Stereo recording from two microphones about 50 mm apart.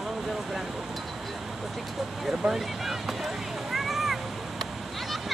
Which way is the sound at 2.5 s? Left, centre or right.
Centre.